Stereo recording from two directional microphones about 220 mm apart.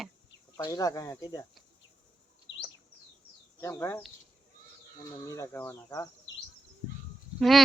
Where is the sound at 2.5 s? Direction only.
55° left (ahead or behind).